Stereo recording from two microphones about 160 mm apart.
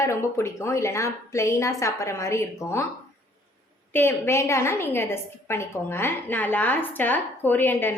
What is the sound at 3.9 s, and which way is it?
A woman's voice, 15° left (ahead or behind).